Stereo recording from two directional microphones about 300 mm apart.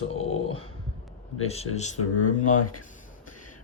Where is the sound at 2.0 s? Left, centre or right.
Left.